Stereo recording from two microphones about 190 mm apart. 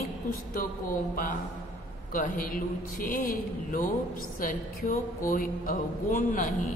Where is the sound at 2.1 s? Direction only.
45° left (ahead or behind).